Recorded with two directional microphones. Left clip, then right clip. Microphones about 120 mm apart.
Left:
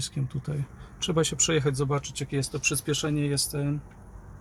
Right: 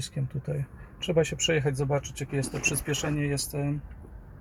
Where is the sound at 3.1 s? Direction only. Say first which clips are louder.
Left 1 dB; 10° left (ahead or behind).